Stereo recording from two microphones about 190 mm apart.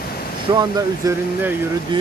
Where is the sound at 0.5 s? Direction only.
20° right (ahead or behind).